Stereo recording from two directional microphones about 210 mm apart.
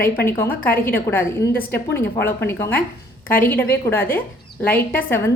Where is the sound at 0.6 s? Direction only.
45° left (ahead or behind).